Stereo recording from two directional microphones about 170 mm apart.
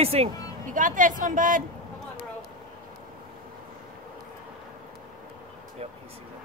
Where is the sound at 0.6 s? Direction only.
50° right (ahead or behind).